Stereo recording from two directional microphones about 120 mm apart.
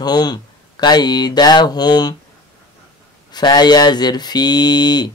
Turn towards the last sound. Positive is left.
turn(degrees=35)  # may be behind; listen again after turning